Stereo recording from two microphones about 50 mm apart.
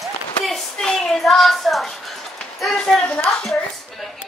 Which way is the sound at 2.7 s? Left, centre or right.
Centre.